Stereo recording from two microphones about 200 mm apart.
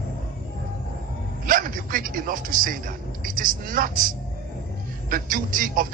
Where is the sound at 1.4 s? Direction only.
45° right (ahead or behind).